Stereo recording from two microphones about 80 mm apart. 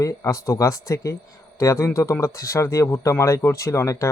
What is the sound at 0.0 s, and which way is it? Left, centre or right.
Speech, left.